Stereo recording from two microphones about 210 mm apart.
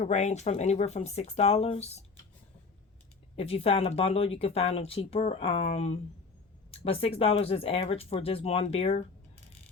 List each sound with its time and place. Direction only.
0.0 s speech: 35° left (ahead or behind)
3.3 s speech: 30° left (ahead or behind)